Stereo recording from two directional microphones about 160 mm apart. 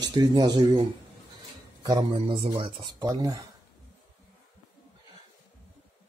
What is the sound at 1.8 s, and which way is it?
Speech, 25° right (ahead or behind).